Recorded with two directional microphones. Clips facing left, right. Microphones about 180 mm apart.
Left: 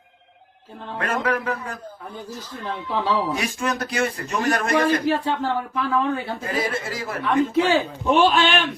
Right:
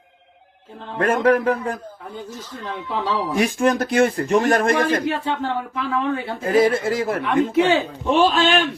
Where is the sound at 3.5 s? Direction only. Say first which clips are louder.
Right 7 dB; 50° right (ahead or behind).